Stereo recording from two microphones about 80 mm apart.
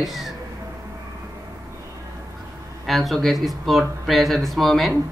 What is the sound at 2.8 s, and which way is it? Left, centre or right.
Speech, centre.